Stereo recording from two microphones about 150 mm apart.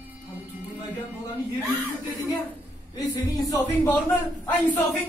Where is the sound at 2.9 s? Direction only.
25° left (ahead or behind).